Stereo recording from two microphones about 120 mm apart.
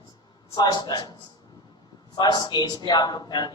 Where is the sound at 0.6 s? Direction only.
35° left (ahead or behind).